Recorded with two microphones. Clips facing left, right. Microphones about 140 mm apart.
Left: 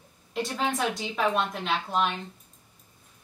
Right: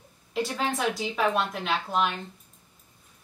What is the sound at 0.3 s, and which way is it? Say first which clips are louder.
Speech: even; centre (ahead or behind).